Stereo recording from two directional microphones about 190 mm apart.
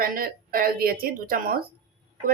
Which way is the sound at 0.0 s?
50° right (ahead or behind).